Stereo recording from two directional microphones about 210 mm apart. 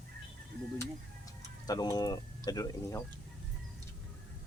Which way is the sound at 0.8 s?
15° left (ahead or behind).